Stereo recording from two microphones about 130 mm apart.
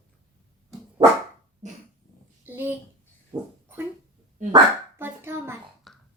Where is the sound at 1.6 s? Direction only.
65° right (ahead or behind).